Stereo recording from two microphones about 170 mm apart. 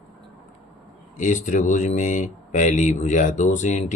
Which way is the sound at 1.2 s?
45° left (ahead or behind).